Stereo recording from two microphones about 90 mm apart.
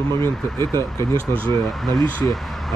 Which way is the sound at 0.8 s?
35° left (ahead or behind).